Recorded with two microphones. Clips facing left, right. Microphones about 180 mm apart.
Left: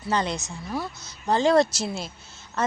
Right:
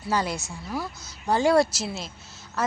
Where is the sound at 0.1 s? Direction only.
5° right (ahead or behind).